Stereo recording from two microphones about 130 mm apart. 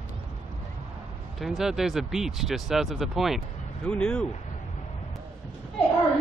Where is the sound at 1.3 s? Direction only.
Centre (ahead or behind).